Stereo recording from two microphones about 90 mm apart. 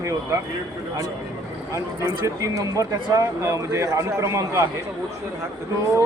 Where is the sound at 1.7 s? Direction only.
35° right (ahead or behind).